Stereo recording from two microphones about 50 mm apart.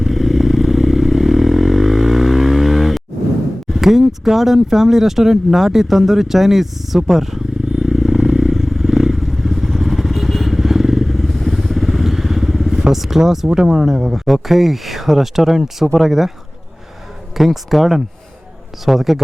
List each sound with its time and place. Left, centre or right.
0.0 s vehicle: centre
3.7 s a sound: centre
12.9 s speech: centre
17.3 s speech: centre